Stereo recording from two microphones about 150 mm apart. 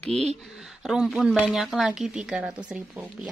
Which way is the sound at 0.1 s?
45° right (ahead or behind).